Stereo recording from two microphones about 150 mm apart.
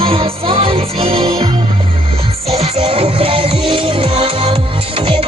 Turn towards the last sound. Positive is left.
turn(degrees=-35)  # may be behind; listen again after turning